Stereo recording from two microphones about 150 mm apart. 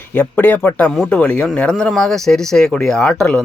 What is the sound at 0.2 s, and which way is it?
A man's voice, 10° left (ahead or behind).